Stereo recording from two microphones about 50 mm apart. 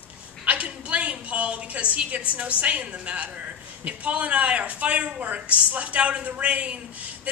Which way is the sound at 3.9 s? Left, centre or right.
Right.